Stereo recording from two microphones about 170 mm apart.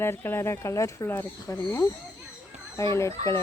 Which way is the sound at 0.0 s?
15° left (ahead or behind).